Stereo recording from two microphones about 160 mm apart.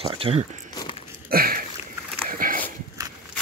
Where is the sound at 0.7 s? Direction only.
25° left (ahead or behind).